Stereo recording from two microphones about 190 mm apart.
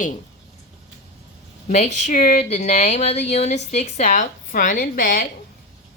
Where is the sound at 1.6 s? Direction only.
35° left (ahead or behind).